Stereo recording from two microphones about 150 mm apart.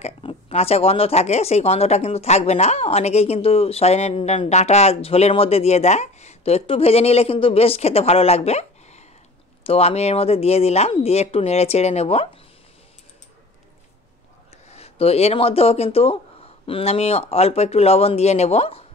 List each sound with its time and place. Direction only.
0.0 s speech: 40° left (ahead or behind)
14.7 s speech: 45° left (ahead or behind)